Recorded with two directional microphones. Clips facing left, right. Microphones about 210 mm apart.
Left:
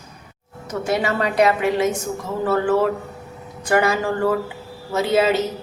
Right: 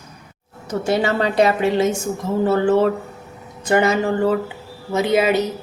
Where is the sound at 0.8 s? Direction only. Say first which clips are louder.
Right 2 dB; 30° right (ahead or behind).